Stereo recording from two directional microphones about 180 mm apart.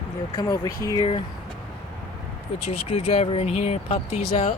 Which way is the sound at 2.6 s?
35° left (ahead or behind).